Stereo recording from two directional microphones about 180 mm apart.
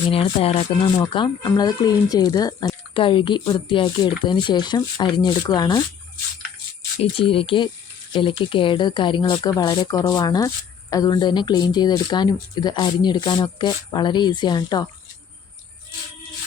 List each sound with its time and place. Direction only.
0.1 s speech: 30° left (ahead or behind)
7.0 s speech: 30° left (ahead or behind)